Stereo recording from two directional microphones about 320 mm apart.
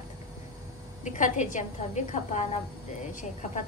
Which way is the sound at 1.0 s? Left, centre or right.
Left.